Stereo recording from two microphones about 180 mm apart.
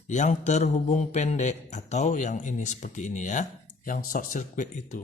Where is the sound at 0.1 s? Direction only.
40° left (ahead or behind).